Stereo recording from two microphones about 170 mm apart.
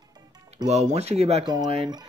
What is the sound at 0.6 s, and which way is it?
Speech, 40° right (ahead or behind).